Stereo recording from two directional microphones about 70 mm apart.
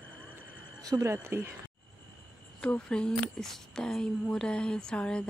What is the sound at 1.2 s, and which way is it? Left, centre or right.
Speech, right.